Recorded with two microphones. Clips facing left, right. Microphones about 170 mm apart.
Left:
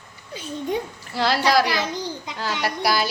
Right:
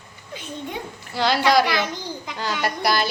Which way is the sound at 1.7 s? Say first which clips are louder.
Even; 30° left (ahead or behind).